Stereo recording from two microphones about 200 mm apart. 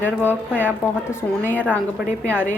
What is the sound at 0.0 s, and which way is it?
A woman's voice, 10° left (ahead or behind).